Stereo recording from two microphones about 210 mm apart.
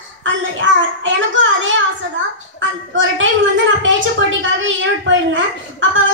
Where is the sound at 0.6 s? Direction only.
65° right (ahead or behind).